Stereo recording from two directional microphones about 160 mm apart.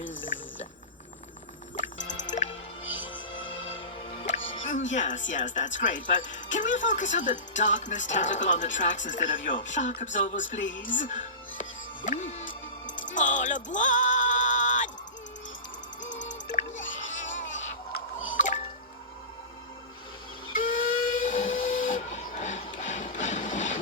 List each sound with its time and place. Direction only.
1.8 s music: 50° left (ahead or behind)
3.1 s music: 30° left (ahead or behind)
4.6 s speech: 50° left (ahead or behind)
12.0 s music: 50° left (ahead or behind)
16.1 s music: 50° left (ahead or behind)
20.7 s steam whistle: 55° left (ahead or behind)